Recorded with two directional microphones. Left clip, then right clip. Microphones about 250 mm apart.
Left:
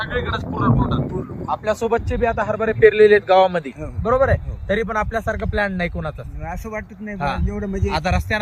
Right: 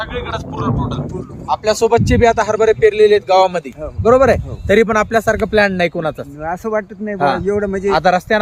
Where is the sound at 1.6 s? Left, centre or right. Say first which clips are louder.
Right 8 dB; right.